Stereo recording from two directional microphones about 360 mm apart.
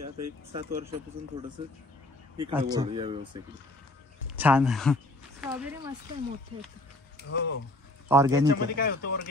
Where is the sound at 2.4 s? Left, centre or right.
Centre.